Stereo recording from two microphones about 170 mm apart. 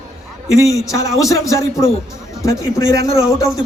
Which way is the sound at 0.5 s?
20° left (ahead or behind).